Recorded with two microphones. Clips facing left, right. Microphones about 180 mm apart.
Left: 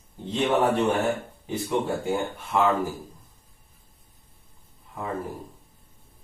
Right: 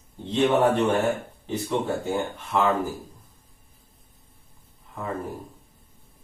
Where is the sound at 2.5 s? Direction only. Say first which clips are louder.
Even; 10° left (ahead or behind).